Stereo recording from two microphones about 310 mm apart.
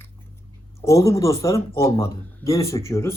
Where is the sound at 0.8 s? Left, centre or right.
Centre.